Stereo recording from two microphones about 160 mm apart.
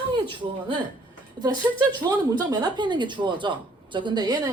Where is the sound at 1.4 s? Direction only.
25° right (ahead or behind).